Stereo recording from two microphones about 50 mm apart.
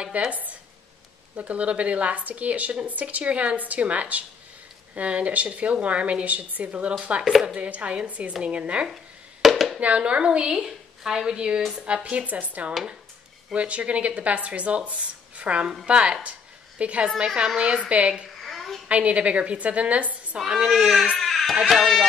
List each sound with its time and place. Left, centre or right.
0.1 s speech: right
1.3 s a woman's voice: right
8.8 s a sound: centre
9.8 s a woman's voice: right
18.4 s a sound: centre
18.9 s a woman's voice: right
20.5 s a child's voice: centre
21.2 s baby cry: centre
21.5 s speech: centre